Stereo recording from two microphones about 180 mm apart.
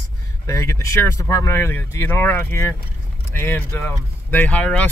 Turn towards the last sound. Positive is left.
turn(degrees=5)  # may be behind; listen again after turning